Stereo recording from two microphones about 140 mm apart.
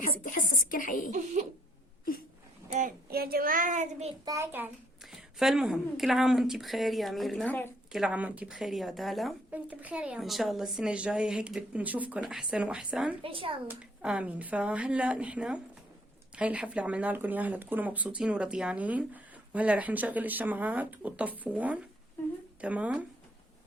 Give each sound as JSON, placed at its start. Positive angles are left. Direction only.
{"t": 0.0, "sound": "a sound", "side_deg": 75}
{"t": 1.1, "sound": "speech", "side_deg": -55}
{"t": 2.7, "sound": "a child's voice", "side_deg": -80}
{"t": 4.3, "sound": "speech", "side_deg": -20}
{"t": 5.4, "sound": "speech", "side_deg": 0}
{"t": 9.5, "sound": "speech", "side_deg": -10}
{"t": 13.2, "sound": "a child's voice", "side_deg": -40}
{"t": 13.7, "sound": "speech", "side_deg": -5}